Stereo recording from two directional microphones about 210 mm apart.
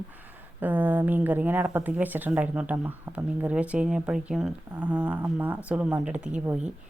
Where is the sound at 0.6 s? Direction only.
10° right (ahead or behind).